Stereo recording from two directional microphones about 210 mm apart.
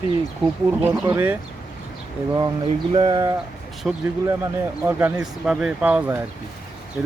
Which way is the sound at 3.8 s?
5° right (ahead or behind).